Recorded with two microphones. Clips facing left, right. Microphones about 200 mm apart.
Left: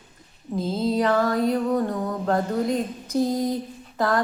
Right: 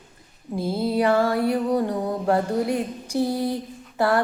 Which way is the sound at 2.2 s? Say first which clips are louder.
Right 1 dB; 10° right (ahead or behind).